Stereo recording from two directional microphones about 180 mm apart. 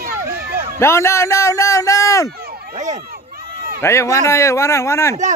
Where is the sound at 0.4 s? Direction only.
60° right (ahead or behind).